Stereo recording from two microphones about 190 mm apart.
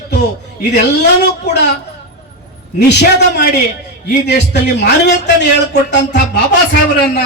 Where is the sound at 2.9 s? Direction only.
60° left (ahead or behind).